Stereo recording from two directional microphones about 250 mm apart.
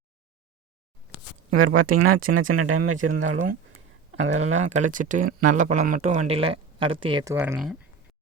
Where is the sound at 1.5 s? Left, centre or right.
Right.